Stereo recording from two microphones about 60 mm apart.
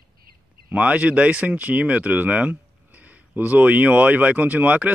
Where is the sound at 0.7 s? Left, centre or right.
Right.